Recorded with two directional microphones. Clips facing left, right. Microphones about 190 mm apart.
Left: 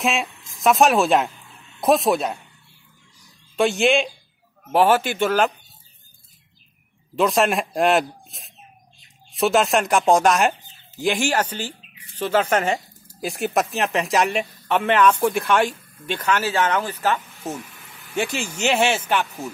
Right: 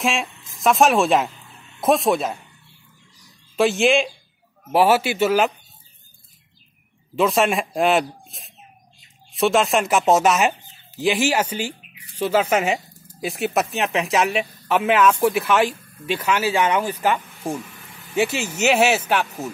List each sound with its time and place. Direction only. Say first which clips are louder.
0.0 s speech: even; centre (ahead or behind)
3.5 s speech: right 1 dB; centre (ahead or behind)
7.2 s speech: even; centre (ahead or behind)